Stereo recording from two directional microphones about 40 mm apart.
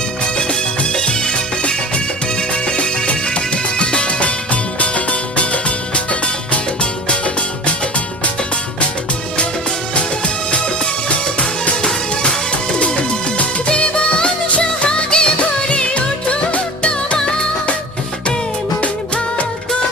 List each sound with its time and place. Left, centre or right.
0.3 s music: left
7.6 s music: left
12.8 s music of bollywood: left
14.8 s music: left
18.8 s music: left